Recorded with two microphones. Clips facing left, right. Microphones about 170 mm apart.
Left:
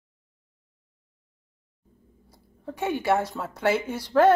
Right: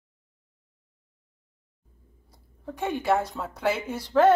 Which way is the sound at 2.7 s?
5° left (ahead or behind).